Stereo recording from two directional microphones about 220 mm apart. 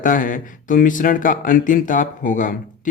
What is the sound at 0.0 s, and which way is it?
Speech, 35° left (ahead or behind).